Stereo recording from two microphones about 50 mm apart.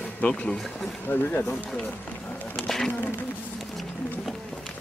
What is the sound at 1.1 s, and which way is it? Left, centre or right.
Speech, left.